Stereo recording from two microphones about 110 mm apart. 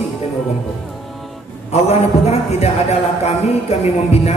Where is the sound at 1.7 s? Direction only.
70° left (ahead or behind).